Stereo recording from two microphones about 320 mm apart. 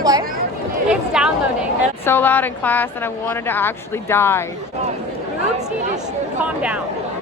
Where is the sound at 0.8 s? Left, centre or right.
Centre.